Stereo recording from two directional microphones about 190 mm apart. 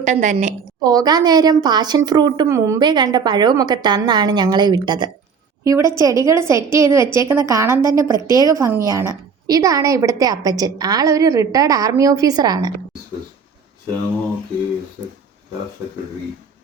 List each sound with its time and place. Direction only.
0.0 s a woman's voice: 40° right (ahead or behind)
0.8 s a woman's voice: 20° right (ahead or behind)